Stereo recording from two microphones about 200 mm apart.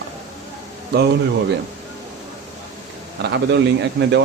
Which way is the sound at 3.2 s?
60° right (ahead or behind).